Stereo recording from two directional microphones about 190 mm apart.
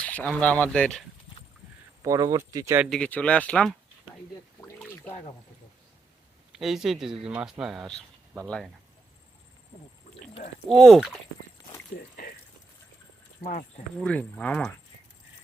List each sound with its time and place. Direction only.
0.0 s speech: 10° left (ahead or behind)
2.0 s speech: 20° right (ahead or behind)
2.8 s speech: 5° left (ahead or behind)
4.6 s a sound: 15° left (ahead or behind)
6.5 s speech: centre (ahead or behind)
10.7 s speech: centre (ahead or behind)
13.4 s speech: 50° left (ahead or behind)
14.0 s speech: 5° left (ahead or behind)